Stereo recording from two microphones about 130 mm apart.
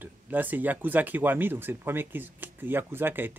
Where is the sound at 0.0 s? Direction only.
15° right (ahead or behind).